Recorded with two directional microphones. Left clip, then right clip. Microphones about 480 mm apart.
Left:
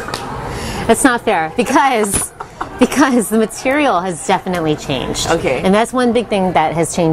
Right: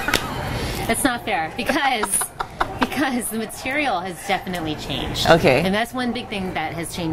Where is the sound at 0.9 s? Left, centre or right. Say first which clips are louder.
Left 10 dB; left.